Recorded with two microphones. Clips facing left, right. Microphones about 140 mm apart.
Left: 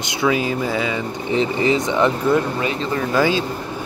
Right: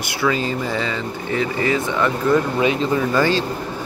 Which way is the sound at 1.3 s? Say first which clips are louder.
Left 2 dB; 20° left (ahead or behind).